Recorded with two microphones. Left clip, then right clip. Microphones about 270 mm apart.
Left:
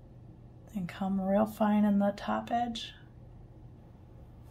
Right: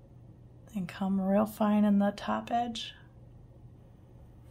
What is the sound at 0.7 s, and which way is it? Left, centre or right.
A woman's voice, centre.